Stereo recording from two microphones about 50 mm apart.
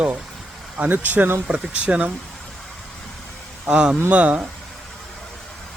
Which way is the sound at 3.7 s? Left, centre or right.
Centre.